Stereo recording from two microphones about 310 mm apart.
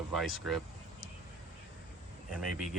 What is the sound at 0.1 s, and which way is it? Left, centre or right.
Speech, centre.